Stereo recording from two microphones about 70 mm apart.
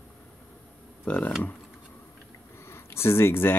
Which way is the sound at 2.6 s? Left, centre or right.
Left.